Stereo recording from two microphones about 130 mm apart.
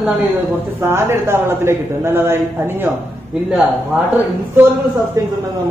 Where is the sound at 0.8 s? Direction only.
20° right (ahead or behind).